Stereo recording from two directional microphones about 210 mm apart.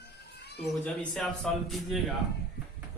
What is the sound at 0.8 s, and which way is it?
Speech, centre (ahead or behind).